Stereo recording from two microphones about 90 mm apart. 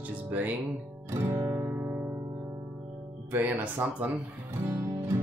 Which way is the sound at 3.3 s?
20° right (ahead or behind).